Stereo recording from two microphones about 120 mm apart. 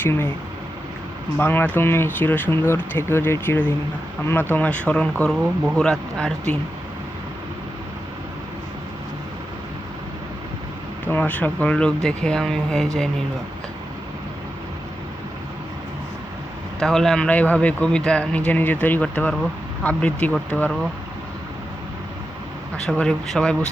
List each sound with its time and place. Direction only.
0.0 s speech: 20° left (ahead or behind)
1.4 s a man's voice: 15° left (ahead or behind)
11.1 s a man's voice: 15° left (ahead or behind)
16.8 s a man's voice: 5° left (ahead or behind)
22.9 s speech: 5° left (ahead or behind)